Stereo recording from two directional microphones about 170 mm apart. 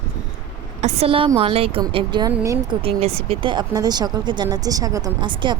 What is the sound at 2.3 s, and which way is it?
Speech, 15° right (ahead or behind).